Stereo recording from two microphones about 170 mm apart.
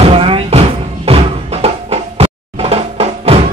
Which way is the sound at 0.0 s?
35° right (ahead or behind).